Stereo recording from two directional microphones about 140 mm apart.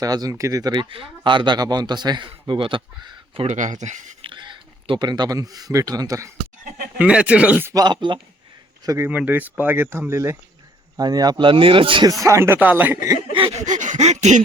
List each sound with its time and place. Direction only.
0.0 s speech: 25° right (ahead or behind)
3.4 s a sound: 60° right (ahead or behind)
4.2 s speech: 35° right (ahead or behind)
7.0 s speech: 10° right (ahead or behind)
7.7 s speech: 30° right (ahead or behind)
9.0 s speech: 10° right (ahead or behind); by 12.1 s 35° right (ahead or behind)
12.2 s speech: 20° right (ahead or behind)
13.3 s a sound: 40° right (ahead or behind)
13.7 s a sound: 60° right (ahead or behind)